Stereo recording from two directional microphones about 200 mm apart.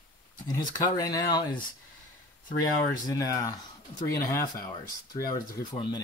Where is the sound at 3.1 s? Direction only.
15° left (ahead or behind).